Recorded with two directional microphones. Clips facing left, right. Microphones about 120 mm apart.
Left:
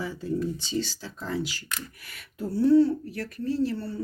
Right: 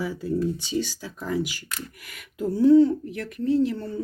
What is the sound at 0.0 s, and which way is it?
Speech, 10° right (ahead or behind).